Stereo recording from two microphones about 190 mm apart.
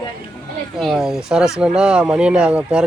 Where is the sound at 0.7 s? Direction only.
Centre (ahead or behind).